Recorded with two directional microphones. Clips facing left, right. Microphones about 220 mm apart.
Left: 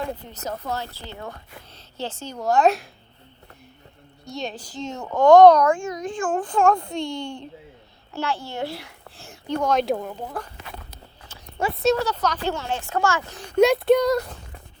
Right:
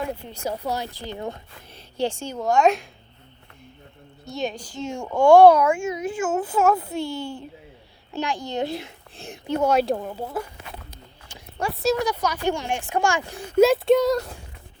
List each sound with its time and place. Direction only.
0.3 s speech: 10° right (ahead or behind)
2.4 s speech: centre (ahead or behind)
4.3 s speech: centre (ahead or behind)
4.9 s a child's voice: 10° right (ahead or behind)
9.6 s speech: 5° right (ahead or behind)
11.6 s speech: centre (ahead or behind)
11.9 s speech: 10° right (ahead or behind)
13.6 s speech: centre (ahead or behind)